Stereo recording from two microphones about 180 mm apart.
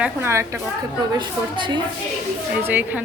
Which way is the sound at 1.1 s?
25° right (ahead or behind).